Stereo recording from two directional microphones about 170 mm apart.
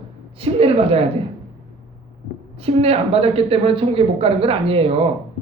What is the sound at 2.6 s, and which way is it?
A man's voice, 35° right (ahead or behind).